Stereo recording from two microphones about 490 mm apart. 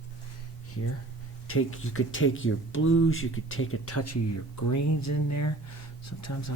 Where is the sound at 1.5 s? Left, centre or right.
Left.